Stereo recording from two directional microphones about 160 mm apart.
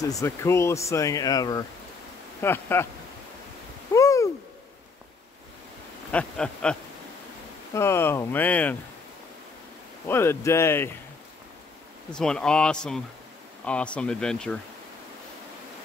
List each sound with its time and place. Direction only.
0.0 s speech: 20° left (ahead or behind)
3.9 s a sound: 20° left (ahead or behind)
6.1 s speech: 5° left (ahead or behind)
7.7 s speech: 15° left (ahead or behind)
10.0 s speech: 15° left (ahead or behind)
12.1 s speech: 5° left (ahead or behind)